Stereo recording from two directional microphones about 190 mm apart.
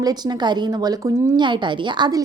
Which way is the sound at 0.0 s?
20° right (ahead or behind).